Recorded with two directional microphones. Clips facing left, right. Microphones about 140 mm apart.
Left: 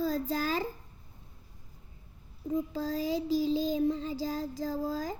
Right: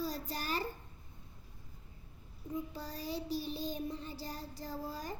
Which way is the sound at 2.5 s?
90° left.